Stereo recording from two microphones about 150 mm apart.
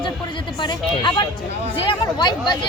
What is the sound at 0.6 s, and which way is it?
Speech, 30° left (ahead or behind).